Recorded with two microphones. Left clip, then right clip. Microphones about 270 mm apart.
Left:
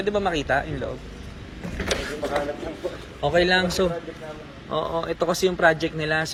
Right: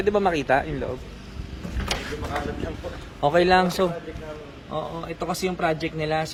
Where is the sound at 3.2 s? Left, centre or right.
Centre.